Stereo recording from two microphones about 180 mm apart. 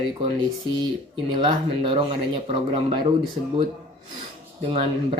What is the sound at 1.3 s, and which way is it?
Speech, 30° right (ahead or behind).